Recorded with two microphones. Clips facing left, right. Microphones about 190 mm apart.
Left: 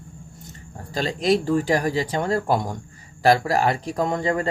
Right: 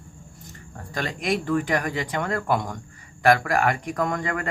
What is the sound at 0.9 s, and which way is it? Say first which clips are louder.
Speech: left 5 dB; 30° left (ahead or behind).